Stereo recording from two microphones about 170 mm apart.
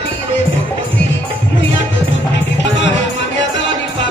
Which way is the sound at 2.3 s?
90° left.